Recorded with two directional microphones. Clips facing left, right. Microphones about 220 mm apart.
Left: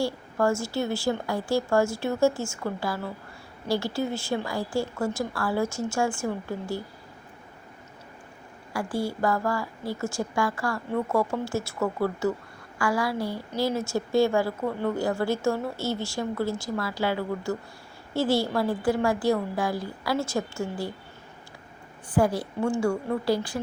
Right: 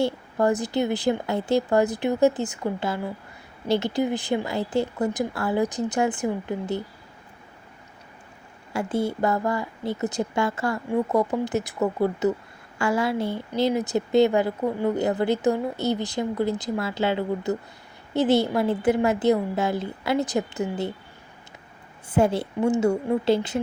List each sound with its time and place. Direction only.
0.0 s a woman's voice: 20° right (ahead or behind)
8.7 s a woman's voice: 20° right (ahead or behind)
22.1 s a woman's voice: 25° right (ahead or behind)